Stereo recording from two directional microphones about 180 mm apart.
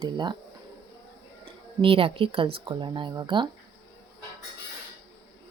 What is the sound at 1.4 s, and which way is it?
A woman's voice, 30° right (ahead or behind).